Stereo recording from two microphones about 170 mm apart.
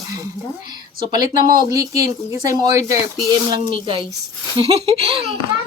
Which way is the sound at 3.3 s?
25° right (ahead or behind).